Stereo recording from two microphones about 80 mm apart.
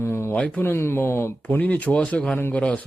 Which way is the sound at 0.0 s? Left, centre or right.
Left.